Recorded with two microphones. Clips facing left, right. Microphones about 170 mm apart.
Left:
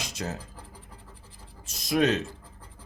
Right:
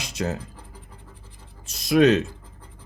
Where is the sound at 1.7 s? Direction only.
70° right (ahead or behind).